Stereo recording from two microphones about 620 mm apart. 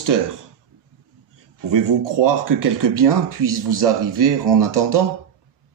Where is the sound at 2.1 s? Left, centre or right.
Right.